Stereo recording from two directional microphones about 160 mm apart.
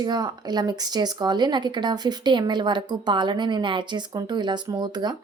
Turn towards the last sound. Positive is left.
turn(degrees=-25)  # may be behind; listen again after turning